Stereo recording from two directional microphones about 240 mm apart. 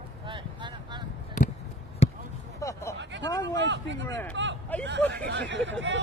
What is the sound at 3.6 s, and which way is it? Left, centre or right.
Speech, right.